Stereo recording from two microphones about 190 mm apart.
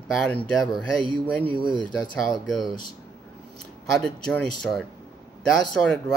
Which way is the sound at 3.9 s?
5° left (ahead or behind).